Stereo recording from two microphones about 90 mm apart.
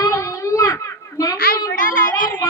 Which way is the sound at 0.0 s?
35° left (ahead or behind).